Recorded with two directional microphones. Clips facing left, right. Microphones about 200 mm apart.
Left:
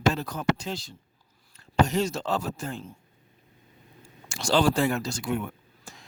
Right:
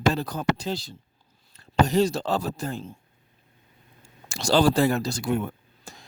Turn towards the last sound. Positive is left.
turn(degrees=-35)  # may be behind; listen again after turning